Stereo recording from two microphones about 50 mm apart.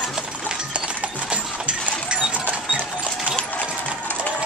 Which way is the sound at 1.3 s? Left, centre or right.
Right.